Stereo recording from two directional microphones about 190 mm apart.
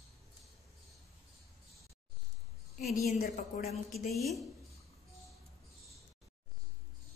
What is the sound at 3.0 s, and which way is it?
Speech, 45° left (ahead or behind).